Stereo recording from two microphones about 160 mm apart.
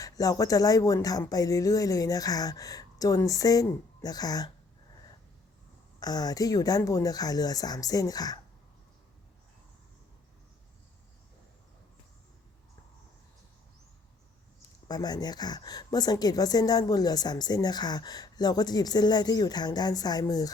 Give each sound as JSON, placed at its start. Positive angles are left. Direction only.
{"t": 0.0, "sound": "a woman's voice", "side_deg": 20}
{"t": 6.0, "sound": "a woman's voice", "side_deg": 25}
{"t": 14.8, "sound": "a woman's voice", "side_deg": 25}